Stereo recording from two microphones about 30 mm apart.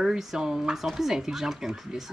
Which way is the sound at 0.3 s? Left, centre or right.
Centre.